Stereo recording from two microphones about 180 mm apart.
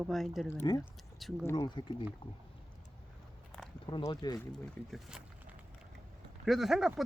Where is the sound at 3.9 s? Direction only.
25° left (ahead or behind).